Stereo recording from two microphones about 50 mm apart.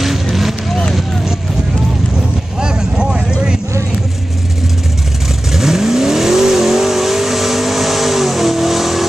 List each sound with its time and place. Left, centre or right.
0.0 s vehicle: centre
2.1 s vehicle: centre
5.5 s vehicle: centre